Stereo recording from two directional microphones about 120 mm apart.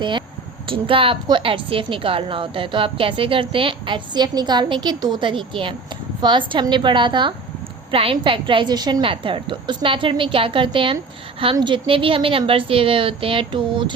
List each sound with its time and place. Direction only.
0.0 s a woman's voice: 40° right (ahead or behind)